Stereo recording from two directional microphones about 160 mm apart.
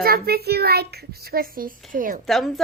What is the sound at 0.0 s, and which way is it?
A child's voice, 70° right (ahead or behind).